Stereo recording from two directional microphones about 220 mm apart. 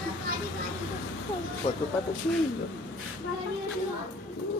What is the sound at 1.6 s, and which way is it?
Speech, 25° left (ahead or behind).